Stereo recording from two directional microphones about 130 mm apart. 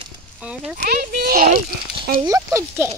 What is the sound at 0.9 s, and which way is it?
Speech, 90° right.